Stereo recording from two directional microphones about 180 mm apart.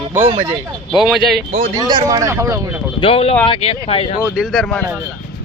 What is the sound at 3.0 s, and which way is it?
Speech, 35° left (ahead or behind).